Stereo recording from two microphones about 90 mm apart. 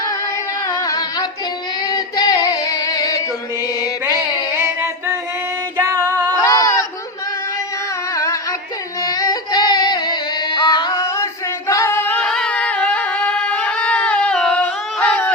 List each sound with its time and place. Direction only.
0.7 s music: 45° left (ahead or behind)
1.9 s female singing: 45° left (ahead or behind)
4.5 s singing: 30° right (ahead or behind)
6.4 s goat: 35° left (ahead or behind)
8.1 s music: 35° left (ahead or behind); by 10.9 s 55° left (ahead or behind)
11.7 s singing: 30° left (ahead or behind)
12.2 s a sound: 10° left (ahead or behind)